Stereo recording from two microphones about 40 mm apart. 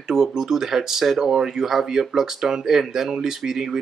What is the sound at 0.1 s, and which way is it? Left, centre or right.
Speech, centre.